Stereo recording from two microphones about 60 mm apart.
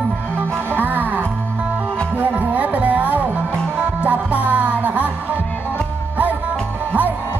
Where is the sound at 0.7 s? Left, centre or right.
Right.